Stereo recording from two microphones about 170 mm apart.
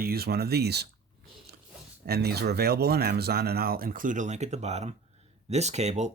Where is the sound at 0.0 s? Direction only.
65° right (ahead or behind).